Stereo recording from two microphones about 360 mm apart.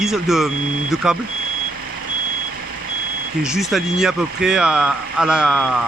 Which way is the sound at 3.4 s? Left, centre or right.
Centre.